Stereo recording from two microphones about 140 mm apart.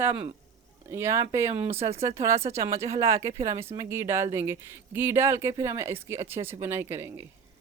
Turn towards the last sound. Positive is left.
turn(degrees=-15)  # may be behind; listen again after turning